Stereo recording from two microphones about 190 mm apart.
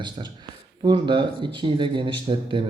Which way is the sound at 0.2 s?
30° right (ahead or behind).